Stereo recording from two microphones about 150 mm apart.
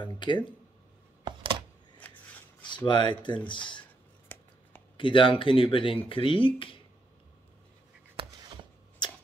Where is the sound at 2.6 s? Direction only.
30° left (ahead or behind).